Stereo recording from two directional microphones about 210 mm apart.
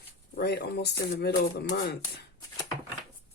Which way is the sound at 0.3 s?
50° left (ahead or behind).